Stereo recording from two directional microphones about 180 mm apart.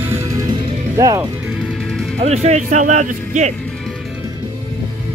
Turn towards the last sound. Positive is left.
turn(degrees=-40)  # may be behind; listen again after turning